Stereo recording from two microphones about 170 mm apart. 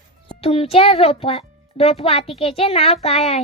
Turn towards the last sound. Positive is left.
turn(degrees=35)  # may be behind; listen again after turning